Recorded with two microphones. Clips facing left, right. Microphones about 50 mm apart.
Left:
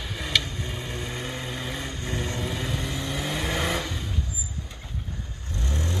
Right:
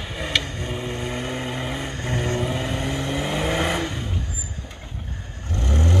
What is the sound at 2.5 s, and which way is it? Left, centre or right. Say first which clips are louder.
Vehicle: right 5 dB; right.